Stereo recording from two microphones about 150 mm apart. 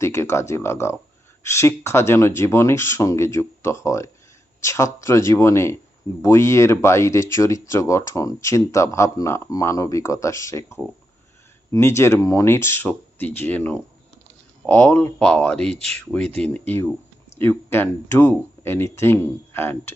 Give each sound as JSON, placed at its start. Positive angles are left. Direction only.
{"t": 0.0, "sound": "speech", "side_deg": 20}